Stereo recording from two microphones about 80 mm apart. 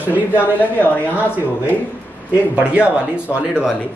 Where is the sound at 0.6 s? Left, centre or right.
Left.